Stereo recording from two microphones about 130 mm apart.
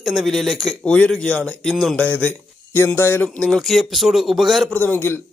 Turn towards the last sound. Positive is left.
turn(degrees=15)  # may be behind; listen again after turning